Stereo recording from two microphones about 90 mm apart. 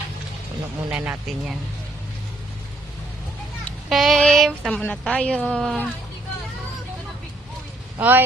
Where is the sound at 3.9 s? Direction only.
Centre (ahead or behind).